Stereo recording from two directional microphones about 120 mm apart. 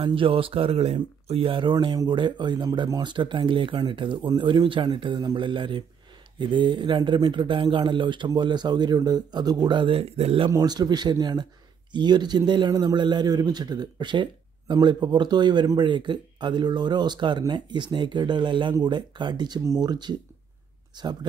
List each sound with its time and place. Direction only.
0.0 s a man's voice: 50° right (ahead or behind)
10.5 s a man's voice: 35° right (ahead or behind)